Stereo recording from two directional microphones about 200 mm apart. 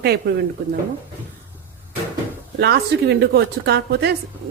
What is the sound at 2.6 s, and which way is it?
A woman's voice, 55° right (ahead or behind).